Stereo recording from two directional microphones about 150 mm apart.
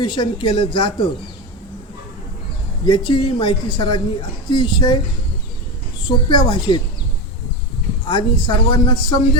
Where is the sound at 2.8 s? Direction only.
35° left (ahead or behind).